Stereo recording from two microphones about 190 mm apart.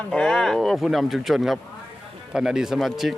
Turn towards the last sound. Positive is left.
turn(degrees=0)  # may be behind; listen again after turning